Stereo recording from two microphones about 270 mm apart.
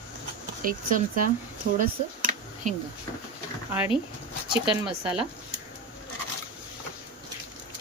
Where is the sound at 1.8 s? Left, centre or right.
Right.